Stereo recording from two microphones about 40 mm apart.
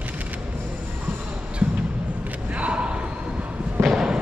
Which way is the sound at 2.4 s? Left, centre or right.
Right.